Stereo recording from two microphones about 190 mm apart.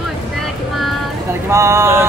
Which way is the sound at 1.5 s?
15° right (ahead or behind).